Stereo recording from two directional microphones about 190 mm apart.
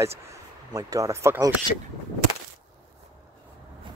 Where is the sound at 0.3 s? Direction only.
20° right (ahead or behind).